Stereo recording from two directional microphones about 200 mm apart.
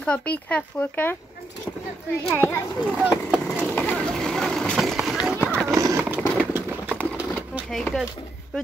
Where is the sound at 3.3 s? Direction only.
5° left (ahead or behind).